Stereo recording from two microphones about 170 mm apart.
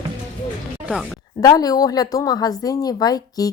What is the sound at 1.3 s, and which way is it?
A woman's voice, 20° left (ahead or behind).